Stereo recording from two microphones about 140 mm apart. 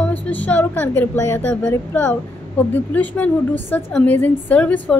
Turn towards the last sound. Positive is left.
turn(degrees=10)  # may be behind; listen again after turning